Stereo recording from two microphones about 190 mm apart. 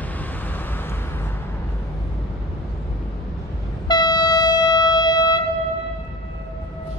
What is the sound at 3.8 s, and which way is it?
Train, 20° left (ahead or behind).